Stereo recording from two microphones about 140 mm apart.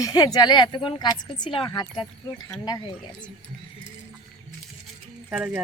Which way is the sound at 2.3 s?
20° left (ahead or behind).